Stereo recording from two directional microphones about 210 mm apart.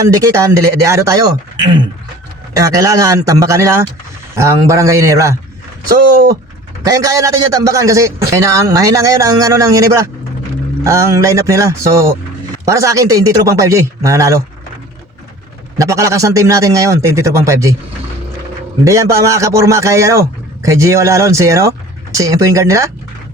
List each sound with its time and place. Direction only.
0.0 s a man's voice: 15° right (ahead or behind)
2.5 s a man's voice: 15° right (ahead or behind)
6.8 s a man's voice: 15° right (ahead or behind)
15.8 s a man's voice: 15° right (ahead or behind)
18.9 s a man's voice: 15° right (ahead or behind)